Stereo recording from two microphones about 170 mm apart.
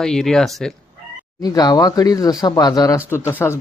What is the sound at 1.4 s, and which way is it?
Speech, 25° left (ahead or behind).